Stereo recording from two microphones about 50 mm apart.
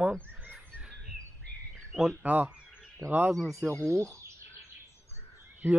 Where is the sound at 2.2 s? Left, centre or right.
Right.